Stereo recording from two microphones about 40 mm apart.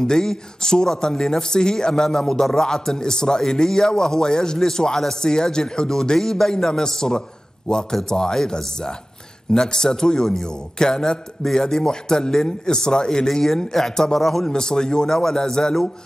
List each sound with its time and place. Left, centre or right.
0.0 s a man's voice: centre
14.4 s a man's voice: centre